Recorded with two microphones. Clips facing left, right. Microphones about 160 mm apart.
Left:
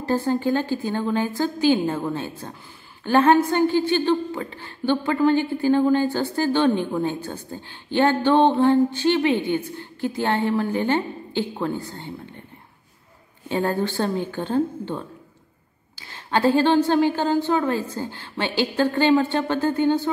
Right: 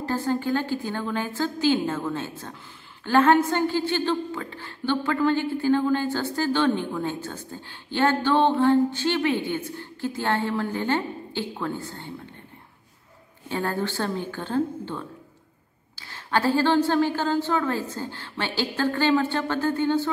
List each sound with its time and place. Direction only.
0.0 s a woman's voice: 15° left (ahead or behind)
13.5 s a woman's voice: 20° left (ahead or behind)